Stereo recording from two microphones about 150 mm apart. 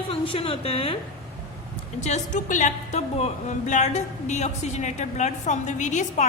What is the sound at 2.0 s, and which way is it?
A woman's voice, 50° left (ahead or behind).